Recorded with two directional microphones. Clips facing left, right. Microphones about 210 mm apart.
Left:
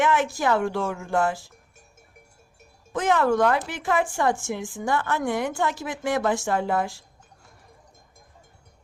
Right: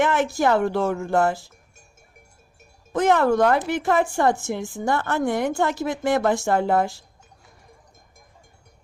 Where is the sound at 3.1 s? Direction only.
40° right (ahead or behind).